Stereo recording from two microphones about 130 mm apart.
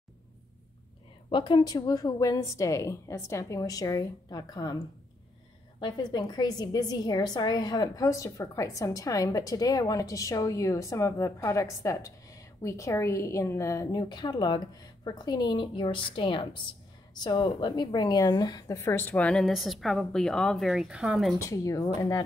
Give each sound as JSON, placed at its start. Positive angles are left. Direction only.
{"t": 1.3, "sound": "a woman's voice", "side_deg": 35}
{"t": 5.8, "sound": "a woman's voice", "side_deg": 35}
{"t": 18.8, "sound": "a woman's voice", "side_deg": 20}
{"t": 21.4, "sound": "a woman's voice", "side_deg": 25}